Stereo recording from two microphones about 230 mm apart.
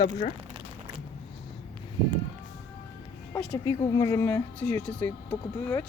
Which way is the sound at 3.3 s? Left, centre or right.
Centre.